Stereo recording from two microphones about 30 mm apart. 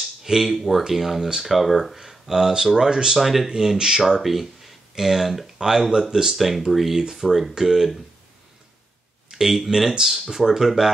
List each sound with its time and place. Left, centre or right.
0.0 s a sound: centre
0.6 s speech: centre
1.7 s speech: centre
2.0 s speech: centre
3.2 s speech: centre
3.7 s speech: centre
4.2 s speech: centre
5.9 s speech: right
6.3 s speech: centre
9.4 s speech: centre